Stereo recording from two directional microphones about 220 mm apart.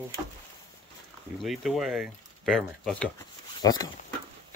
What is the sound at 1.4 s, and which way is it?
Speech, centre (ahead or behind).